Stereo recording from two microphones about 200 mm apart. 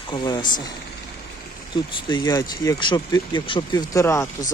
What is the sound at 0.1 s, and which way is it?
Speech, 20° left (ahead or behind).